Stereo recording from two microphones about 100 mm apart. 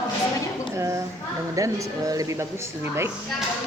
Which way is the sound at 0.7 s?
30° right (ahead or behind).